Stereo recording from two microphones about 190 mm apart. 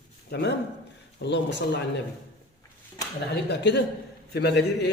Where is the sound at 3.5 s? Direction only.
65° left (ahead or behind).